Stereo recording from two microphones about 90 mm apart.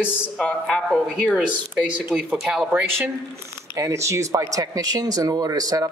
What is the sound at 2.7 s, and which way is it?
Speech, 20° right (ahead or behind).